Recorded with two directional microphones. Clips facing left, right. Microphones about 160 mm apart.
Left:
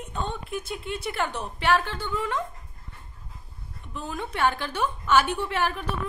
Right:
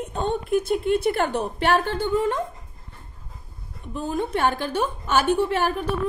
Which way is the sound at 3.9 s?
40° right (ahead or behind).